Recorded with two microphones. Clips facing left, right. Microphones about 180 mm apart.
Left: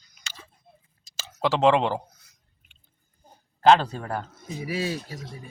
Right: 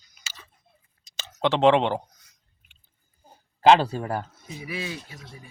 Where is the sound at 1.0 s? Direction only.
5° left (ahead or behind).